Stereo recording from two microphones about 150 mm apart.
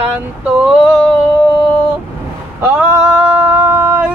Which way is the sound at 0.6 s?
5° right (ahead or behind).